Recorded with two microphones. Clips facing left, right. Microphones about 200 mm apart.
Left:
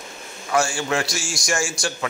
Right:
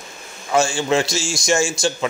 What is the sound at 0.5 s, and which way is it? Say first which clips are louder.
Speech: right 4 dB; 25° right (ahead or behind).